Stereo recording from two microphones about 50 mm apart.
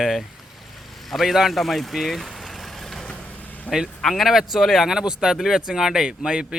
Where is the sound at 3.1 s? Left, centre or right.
Left.